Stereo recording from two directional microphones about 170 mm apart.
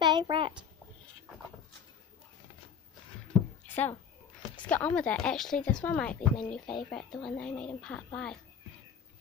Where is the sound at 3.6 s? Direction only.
10° left (ahead or behind).